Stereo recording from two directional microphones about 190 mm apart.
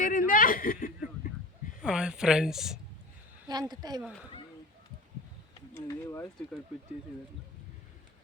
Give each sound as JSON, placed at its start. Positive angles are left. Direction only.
{"t": 0.0, "sound": "a sound", "side_deg": 45}
{"t": 1.8, "sound": "speech", "side_deg": -5}
{"t": 3.5, "sound": "a woman's voice", "side_deg": -20}
{"t": 4.0, "sound": "speech", "side_deg": -5}
{"t": 5.7, "sound": "speech", "side_deg": 15}